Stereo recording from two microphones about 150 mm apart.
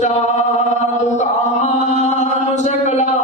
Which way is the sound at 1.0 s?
50° left (ahead or behind).